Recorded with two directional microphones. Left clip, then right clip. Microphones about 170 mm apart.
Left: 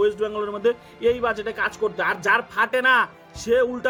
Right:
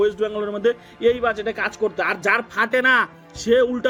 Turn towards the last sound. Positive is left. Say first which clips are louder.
# right 3 dB
turn(degrees=-25)  # may be behind; listen again after turning